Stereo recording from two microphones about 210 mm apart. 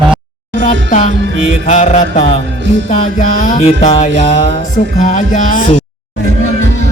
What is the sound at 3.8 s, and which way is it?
Music, 30° left (ahead or behind).